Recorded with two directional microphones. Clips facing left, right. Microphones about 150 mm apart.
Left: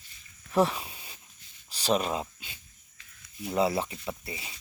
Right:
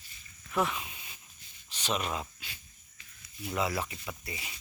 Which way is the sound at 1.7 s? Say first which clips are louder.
Left 6 dB; 35° left (ahead or behind).